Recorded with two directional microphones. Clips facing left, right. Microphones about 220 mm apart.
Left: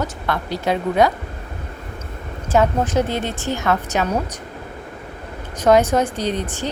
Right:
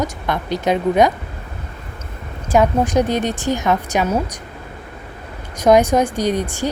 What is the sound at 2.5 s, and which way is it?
A woman's voice, 15° right (ahead or behind).